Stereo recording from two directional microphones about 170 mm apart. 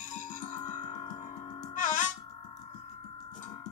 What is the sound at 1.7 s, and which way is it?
Music, 50° left (ahead or behind).